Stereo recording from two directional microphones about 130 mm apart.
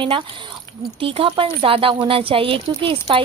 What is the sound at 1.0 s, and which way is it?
A woman's voice, 45° right (ahead or behind).